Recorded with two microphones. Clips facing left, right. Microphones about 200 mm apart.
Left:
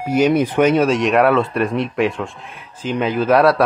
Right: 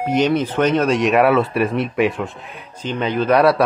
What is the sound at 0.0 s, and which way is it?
Speech, 10° left (ahead or behind).